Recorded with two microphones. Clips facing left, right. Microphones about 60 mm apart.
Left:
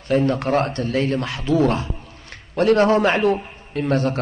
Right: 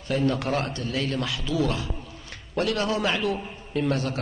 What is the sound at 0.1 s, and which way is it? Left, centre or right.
Speech, left.